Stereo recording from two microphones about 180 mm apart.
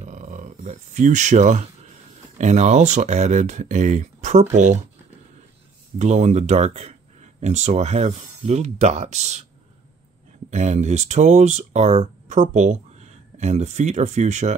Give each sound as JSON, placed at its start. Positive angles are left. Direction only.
{"t": 0.0, "sound": "speech", "side_deg": -40}
{"t": 5.9, "sound": "speech", "side_deg": -40}
{"t": 10.5, "sound": "speech", "side_deg": -40}